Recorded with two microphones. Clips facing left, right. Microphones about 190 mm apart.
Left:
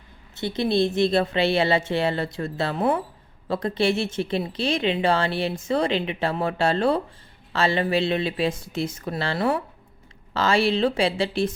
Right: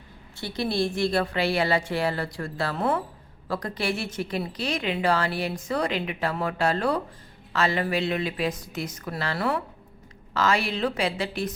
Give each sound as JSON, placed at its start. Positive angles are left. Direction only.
{"t": 0.3, "sound": "a woman's voice", "side_deg": 20}